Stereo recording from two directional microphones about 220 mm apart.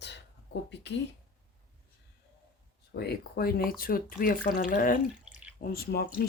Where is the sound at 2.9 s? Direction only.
45° left (ahead or behind).